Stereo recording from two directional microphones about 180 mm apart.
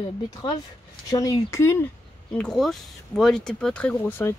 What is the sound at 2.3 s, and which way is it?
Speech, centre (ahead or behind).